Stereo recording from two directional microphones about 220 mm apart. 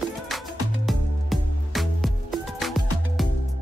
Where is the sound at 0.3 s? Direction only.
Centre (ahead or behind).